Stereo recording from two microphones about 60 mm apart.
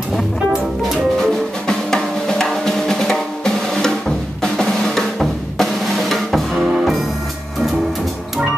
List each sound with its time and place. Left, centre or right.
1.2 s drum: centre